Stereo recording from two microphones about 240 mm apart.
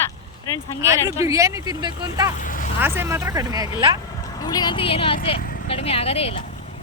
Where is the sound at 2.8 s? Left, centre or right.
Centre.